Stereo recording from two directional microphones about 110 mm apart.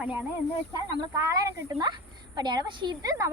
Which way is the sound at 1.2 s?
25° right (ahead or behind).